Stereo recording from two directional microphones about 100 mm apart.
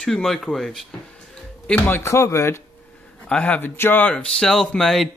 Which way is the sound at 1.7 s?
20° left (ahead or behind).